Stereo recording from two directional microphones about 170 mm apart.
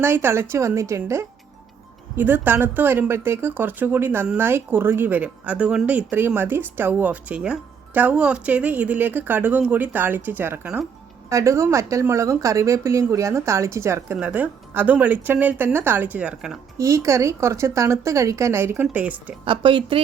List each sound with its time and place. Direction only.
0.0 s speech: 15° right (ahead or behind)
16.7 s speech: 15° right (ahead or behind)
19.5 s a woman's voice: 30° right (ahead or behind)